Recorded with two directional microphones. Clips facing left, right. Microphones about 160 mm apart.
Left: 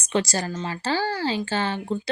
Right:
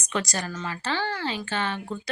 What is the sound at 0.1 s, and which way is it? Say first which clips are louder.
Speech: left 5 dB; 30° left (ahead or behind).